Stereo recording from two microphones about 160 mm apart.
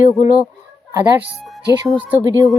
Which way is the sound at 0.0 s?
55° left (ahead or behind).